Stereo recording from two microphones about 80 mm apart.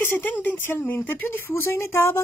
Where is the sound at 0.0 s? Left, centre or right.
Left.